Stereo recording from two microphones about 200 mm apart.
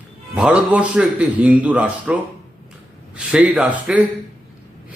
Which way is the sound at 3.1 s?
5° right (ahead or behind).